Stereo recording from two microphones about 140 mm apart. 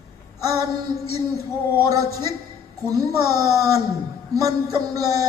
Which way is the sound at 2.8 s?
25° right (ahead or behind).